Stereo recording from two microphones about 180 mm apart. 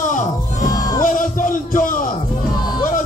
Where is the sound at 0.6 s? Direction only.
20° left (ahead or behind).